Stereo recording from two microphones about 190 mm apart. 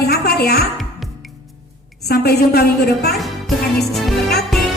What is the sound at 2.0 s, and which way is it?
A woman's voice, 55° left (ahead or behind).